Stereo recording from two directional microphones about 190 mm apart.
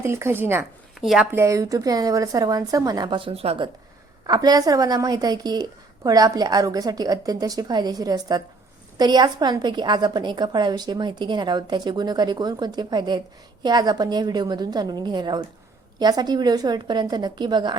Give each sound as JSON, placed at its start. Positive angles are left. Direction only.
{"t": 0.0, "sound": "a woman's voice", "side_deg": -15}